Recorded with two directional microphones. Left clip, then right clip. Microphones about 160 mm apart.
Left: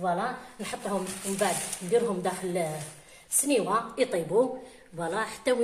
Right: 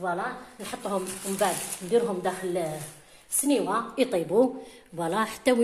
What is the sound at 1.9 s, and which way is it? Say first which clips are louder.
A woman's voice: right 1 dB; 20° right (ahead or behind).